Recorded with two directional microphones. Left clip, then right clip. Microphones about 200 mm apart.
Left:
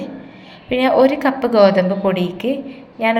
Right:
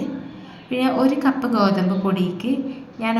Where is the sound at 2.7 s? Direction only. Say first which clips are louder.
Left 7 dB; 10° left (ahead or behind).